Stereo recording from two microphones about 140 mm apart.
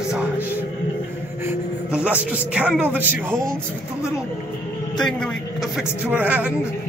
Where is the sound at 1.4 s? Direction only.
10° right (ahead or behind).